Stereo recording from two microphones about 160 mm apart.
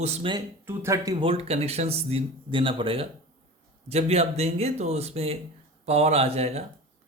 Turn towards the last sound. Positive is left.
turn(degrees=-40)  # may be behind; listen again after turning